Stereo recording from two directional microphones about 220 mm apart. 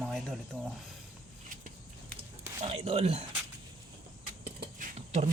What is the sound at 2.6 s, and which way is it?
Speech, 25° right (ahead or behind).